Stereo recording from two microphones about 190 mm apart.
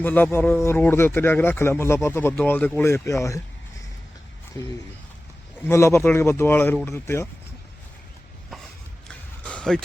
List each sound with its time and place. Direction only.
0.0 s speech: 10° left (ahead or behind)
4.6 s speech: 20° left (ahead or behind)
9.4 s a sound: 5° left (ahead or behind)